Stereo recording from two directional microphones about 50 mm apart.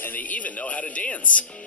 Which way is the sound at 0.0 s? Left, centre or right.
Left.